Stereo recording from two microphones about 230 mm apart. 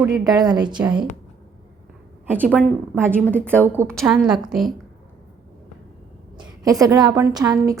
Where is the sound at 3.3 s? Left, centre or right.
Centre.